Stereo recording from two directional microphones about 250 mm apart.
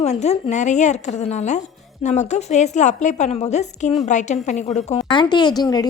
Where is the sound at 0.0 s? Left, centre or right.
Left.